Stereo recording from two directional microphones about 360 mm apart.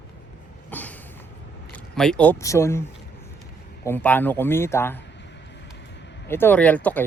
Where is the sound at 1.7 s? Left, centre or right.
Centre.